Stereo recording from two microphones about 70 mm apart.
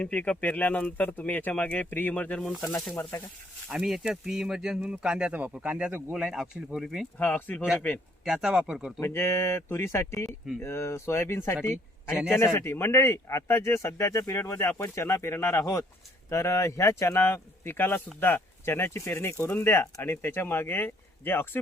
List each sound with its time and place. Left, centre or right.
0.0 s speech: left
3.7 s speech: centre
7.2 s speech: left
8.2 s speech: centre
9.0 s speech: left
14.3 s speech: left
17.2 s speech: left